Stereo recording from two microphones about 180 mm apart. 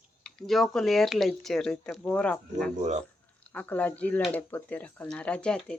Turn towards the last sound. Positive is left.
turn(degrees=5)  # may be behind; listen again after turning